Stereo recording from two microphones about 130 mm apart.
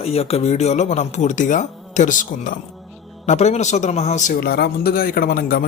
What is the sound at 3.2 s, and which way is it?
Speech, 60° left (ahead or behind).